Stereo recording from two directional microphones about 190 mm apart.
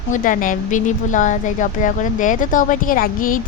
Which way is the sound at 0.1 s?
45° left (ahead or behind).